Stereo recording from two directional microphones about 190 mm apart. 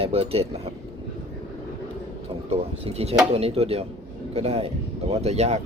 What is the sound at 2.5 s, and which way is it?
Speech, 30° right (ahead or behind).